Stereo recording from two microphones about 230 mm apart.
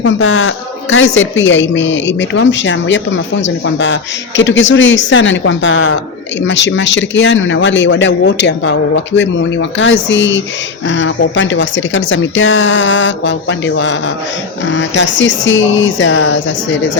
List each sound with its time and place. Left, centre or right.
0.0 s a woman's voice: left